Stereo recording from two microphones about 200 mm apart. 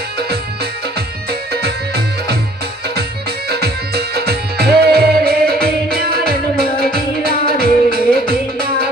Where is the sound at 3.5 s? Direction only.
50° right (ahead or behind).